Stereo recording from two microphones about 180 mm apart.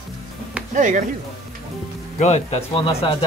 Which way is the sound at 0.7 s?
45° right (ahead or behind).